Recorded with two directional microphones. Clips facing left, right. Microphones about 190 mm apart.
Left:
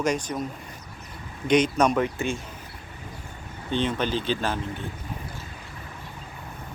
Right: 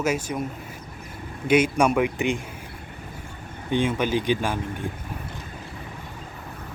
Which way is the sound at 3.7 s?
10° right (ahead or behind).